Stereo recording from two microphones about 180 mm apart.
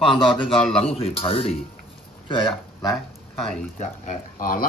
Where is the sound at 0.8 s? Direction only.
35° left (ahead or behind).